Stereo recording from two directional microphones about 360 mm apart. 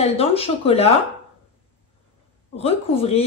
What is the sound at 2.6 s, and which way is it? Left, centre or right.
Speech, centre.